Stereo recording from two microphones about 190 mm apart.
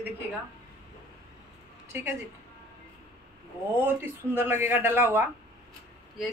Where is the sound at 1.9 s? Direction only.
10° right (ahead or behind).